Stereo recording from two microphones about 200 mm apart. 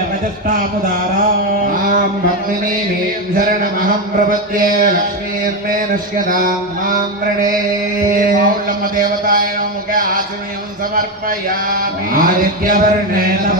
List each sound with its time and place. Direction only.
1.6 s mantra: 45° right (ahead or behind)
3.3 s mantra: 45° right (ahead or behind)
8.1 s mantra: 45° right (ahead or behind)
11.0 s mantra: 45° right (ahead or behind)